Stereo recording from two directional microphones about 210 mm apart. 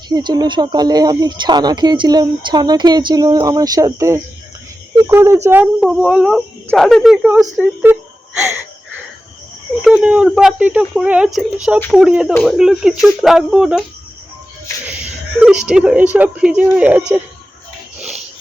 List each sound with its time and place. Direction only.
0.1 s speech: 20° right (ahead or behind)
9.8 s speech: 5° right (ahead or behind)
15.4 s speech: 5° right (ahead or behind)